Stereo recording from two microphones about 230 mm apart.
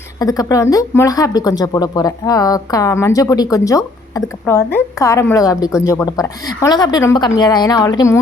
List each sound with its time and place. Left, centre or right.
0.2 s speech: centre